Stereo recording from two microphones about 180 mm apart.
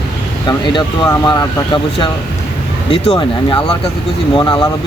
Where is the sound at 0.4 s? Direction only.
25° left (ahead or behind).